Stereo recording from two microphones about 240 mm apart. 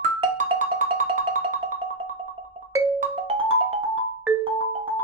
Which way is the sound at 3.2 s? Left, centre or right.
Right.